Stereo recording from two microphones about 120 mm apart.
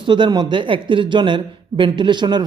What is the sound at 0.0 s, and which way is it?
Speech, 40° right (ahead or behind).